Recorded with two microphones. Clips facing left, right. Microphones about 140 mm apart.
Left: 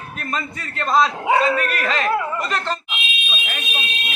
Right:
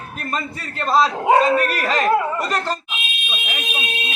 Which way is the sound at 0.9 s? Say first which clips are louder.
Right 2 dB; 40° right (ahead or behind).